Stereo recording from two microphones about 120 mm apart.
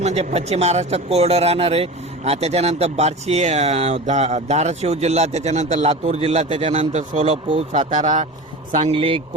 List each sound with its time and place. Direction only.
0.0 s speech: 65° right (ahead or behind)
5.9 s a man's voice: 55° right (ahead or behind)
6.9 s speech: 80° right
8.9 s a man's voice: 45° right (ahead or behind)